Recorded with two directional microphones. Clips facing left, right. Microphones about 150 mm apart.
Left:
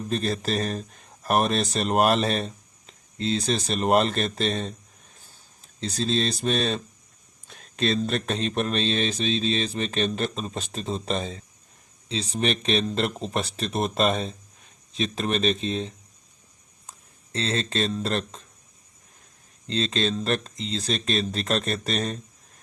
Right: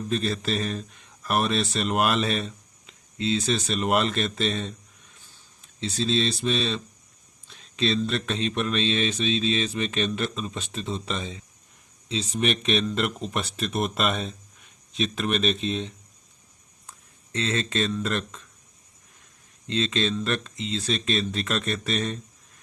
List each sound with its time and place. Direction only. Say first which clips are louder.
0.1 s speech: left 1 dB; 40° left (ahead or behind)
17.3 s speech: even; 35° left (ahead or behind)
19.6 s speech: even; 35° left (ahead or behind)